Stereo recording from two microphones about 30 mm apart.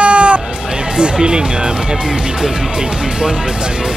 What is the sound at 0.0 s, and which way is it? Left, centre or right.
Music, right.